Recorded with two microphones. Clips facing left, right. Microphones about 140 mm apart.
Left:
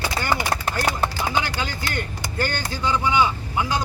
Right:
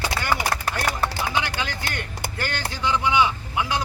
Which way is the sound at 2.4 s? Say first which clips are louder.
Left 4 dB; centre (ahead or behind).